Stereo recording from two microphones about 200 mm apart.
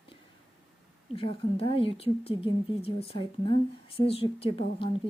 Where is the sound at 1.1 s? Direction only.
25° left (ahead or behind).